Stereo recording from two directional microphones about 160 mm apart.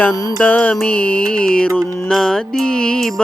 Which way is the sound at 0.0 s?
20° left (ahead or behind).